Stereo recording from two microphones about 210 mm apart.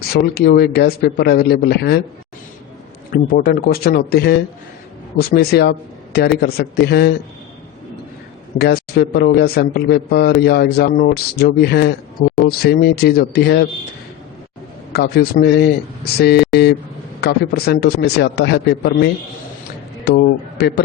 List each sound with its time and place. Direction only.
0.1 s a man's voice: 45° left (ahead or behind)
3.1 s a man's voice: 45° left (ahead or behind)
8.5 s a man's voice: 50° left (ahead or behind)
14.9 s a man's voice: 50° left (ahead or behind)